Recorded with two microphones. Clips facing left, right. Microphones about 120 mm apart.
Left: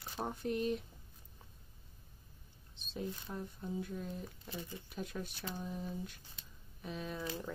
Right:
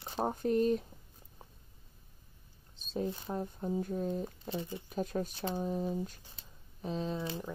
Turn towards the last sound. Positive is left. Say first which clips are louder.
# right 5 dB
turn(degrees=-25)  # may be behind; listen again after turning